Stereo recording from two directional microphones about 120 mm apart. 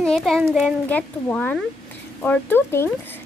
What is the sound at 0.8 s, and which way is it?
Speech, 15° left (ahead or behind).